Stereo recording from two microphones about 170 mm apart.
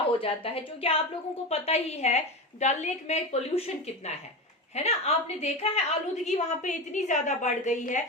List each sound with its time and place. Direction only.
0.2 s a woman's voice: 35° left (ahead or behind)